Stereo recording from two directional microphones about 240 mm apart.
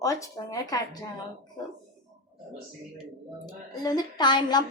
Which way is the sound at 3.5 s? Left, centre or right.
Centre.